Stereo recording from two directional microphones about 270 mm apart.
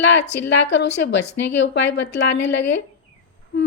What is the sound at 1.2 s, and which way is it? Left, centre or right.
Speech, left.